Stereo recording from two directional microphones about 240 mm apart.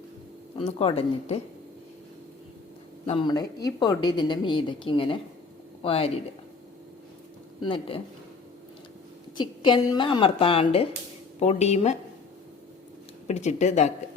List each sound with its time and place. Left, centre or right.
0.5 s a woman's voice: left
3.1 s a woman's voice: centre
7.6 s a woman's voice: left
9.4 s a woman's voice: centre
13.2 s a woman's voice: left